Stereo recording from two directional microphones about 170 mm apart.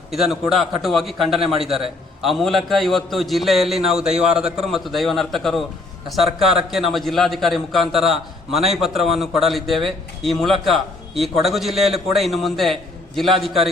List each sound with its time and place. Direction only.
0.1 s a man's voice: centre (ahead or behind)